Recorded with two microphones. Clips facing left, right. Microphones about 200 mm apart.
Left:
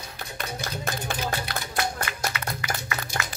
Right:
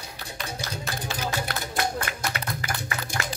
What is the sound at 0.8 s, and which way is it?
Music, 55° left (ahead or behind).